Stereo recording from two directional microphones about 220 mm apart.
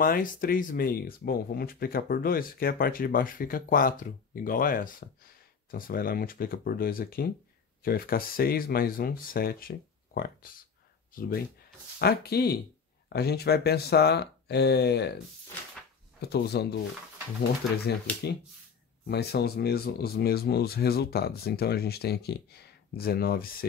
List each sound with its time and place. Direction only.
0.0 s speech: 40° left (ahead or behind)
16.2 s speech: 45° left (ahead or behind)
18.1 s speech: 5° left (ahead or behind)
19.0 s speech: 45° left (ahead or behind)